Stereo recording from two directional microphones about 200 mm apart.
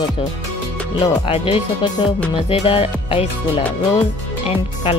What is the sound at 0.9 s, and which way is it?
Speech, 30° left (ahead or behind).